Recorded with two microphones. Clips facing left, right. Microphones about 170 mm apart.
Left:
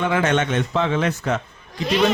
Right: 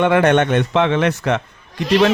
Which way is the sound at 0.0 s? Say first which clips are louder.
Right 6 dB; 65° right (ahead or behind).